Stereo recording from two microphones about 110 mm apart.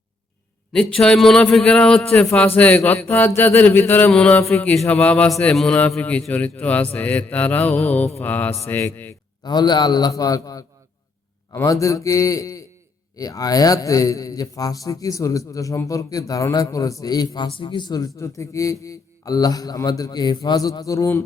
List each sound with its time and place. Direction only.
0.7 s a man's voice: 5° left (ahead or behind)
9.4 s a man's voice: 40° left (ahead or behind)